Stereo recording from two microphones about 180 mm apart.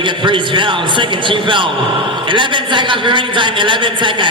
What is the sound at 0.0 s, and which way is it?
A man's voice, 25° right (ahead or behind).